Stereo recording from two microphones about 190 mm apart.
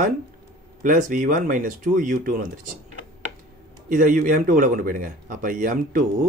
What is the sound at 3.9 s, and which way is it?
A man's voice, 50° right (ahead or behind).